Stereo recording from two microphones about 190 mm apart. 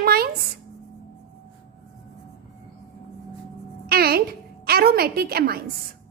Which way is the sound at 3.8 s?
55° right (ahead or behind).